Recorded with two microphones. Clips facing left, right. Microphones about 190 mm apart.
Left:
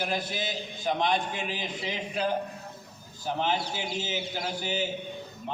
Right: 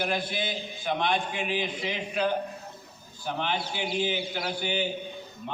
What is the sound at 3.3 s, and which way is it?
A man's voice, 40° left (ahead or behind).